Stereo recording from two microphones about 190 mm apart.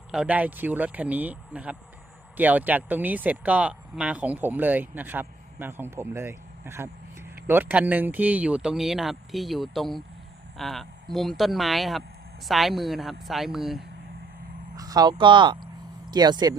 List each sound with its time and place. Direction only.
0.1 s speech: 5° right (ahead or behind)
14.8 s speech: 20° right (ahead or behind)